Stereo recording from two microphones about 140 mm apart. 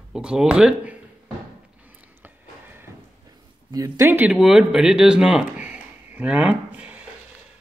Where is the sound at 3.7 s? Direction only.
25° right (ahead or behind).